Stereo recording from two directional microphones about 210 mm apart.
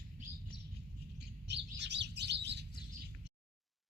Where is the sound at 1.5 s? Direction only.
55° right (ahead or behind).